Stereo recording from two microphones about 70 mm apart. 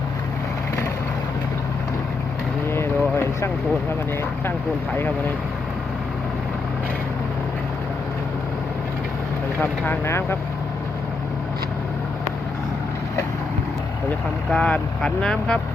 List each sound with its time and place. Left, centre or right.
2.6 s a sound: left
9.6 s speech: left
14.5 s speech: centre